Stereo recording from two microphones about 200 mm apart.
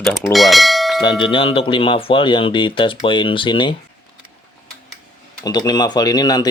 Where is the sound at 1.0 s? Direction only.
25° left (ahead or behind).